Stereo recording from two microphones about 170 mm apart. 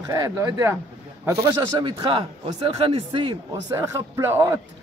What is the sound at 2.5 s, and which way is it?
Speech, 35° right (ahead or behind).